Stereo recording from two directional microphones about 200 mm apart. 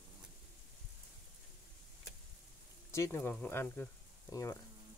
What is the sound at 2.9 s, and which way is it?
Speech, 15° left (ahead or behind).